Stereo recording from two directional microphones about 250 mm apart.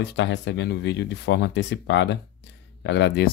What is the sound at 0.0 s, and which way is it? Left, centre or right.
Speech, left.